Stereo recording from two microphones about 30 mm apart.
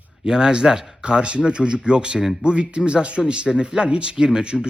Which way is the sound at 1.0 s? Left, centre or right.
Right.